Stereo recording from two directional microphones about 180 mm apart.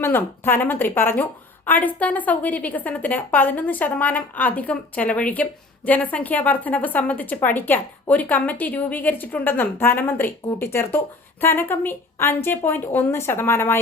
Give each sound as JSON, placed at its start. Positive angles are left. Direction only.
{"t": 0.0, "sound": "a woman's voice", "side_deg": 10}